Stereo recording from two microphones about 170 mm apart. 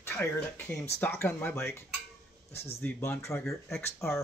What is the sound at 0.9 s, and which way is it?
Speech, 10° left (ahead or behind).